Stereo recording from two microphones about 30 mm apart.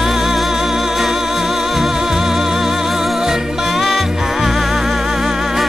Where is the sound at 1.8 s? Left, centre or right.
Centre.